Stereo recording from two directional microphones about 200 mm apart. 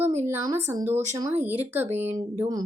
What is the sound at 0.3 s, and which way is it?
Speech, 15° right (ahead or behind).